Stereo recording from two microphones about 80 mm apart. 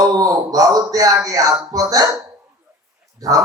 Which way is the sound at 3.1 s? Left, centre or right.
Right.